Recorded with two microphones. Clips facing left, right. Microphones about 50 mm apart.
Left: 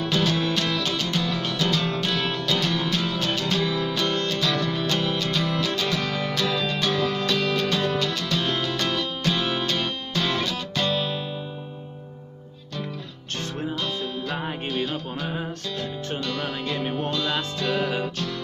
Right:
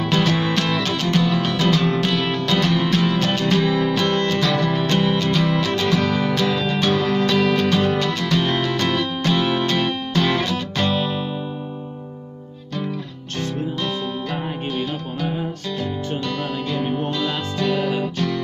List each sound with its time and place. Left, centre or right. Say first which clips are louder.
0.1 s music: right 4 dB; right
2.3 s music: right 5 dB; right
3.5 s music: right 6 dB; right
4.4 s music: right 5 dB; right
4.8 s music: right 6 dB; right
6.1 s music: right 5 dB; right
9.7 s music: right 6 dB; right
16.6 s music: right 4 dB; centre